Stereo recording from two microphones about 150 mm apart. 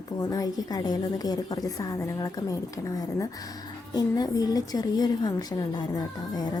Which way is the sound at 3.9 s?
25° left (ahead or behind).